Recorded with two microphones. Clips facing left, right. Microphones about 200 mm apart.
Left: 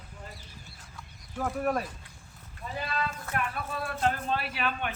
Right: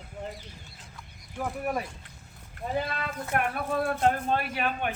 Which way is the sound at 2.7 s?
55° right (ahead or behind).